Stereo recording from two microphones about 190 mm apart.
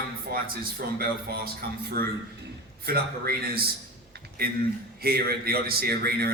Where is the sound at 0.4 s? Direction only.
55° right (ahead or behind).